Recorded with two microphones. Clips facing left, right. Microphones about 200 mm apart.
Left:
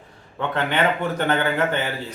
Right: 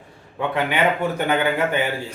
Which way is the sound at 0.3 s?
10° right (ahead or behind).